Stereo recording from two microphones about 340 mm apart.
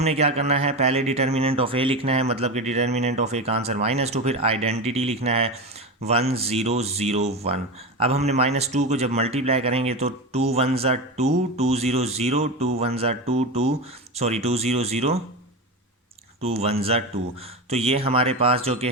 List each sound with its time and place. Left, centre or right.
0.0 s speech: centre
16.4 s speech: centre